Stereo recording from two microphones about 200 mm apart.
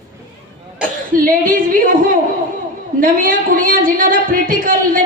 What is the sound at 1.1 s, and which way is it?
Speech, 45° right (ahead or behind).